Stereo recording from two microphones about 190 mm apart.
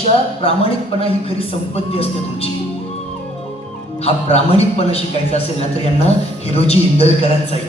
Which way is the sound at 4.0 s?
35° left (ahead or behind).